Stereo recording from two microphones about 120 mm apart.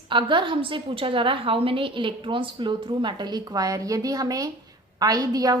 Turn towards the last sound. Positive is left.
turn(degrees=-30)  # may be behind; listen again after turning